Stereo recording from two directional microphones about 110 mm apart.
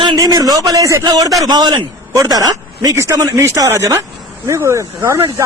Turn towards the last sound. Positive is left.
turn(degrees=-25)  # may be behind; listen again after turning